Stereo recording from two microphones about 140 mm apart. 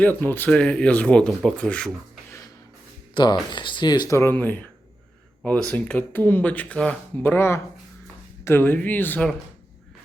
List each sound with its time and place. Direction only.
0.0 s speech: 15° left (ahead or behind)
3.2 s speech: 35° left (ahead or behind); by 9.3 s 10° left (ahead or behind)